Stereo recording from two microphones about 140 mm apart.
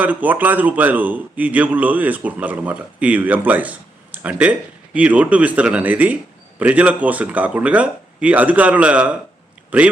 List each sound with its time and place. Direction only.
0.0 s a man's voice: 10° right (ahead or behind)